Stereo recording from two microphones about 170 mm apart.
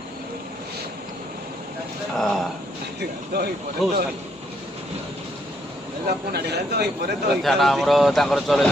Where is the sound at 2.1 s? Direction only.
Centre (ahead or behind).